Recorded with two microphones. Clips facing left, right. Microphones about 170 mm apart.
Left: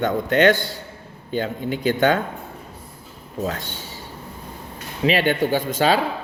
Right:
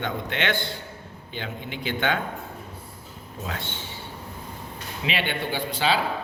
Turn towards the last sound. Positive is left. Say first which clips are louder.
# left 6 dB
turn(degrees=45)  # may be behind; listen again after turning